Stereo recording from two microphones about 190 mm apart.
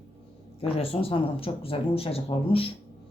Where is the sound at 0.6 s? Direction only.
30° left (ahead or behind).